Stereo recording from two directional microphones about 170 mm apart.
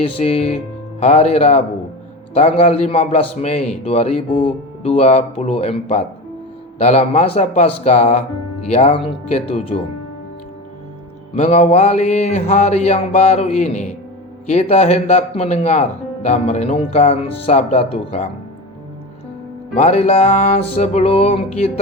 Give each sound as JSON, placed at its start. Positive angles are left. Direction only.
{"t": 0.2, "sound": "speech", "side_deg": 40}
{"t": 11.3, "sound": "speech", "side_deg": 40}
{"t": 19.7, "sound": "speech", "side_deg": 40}